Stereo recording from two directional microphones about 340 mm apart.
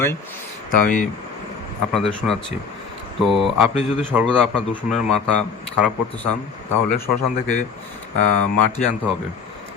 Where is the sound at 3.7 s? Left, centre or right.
Centre.